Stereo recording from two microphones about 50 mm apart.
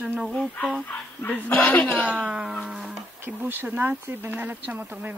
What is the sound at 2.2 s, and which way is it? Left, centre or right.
Music, centre.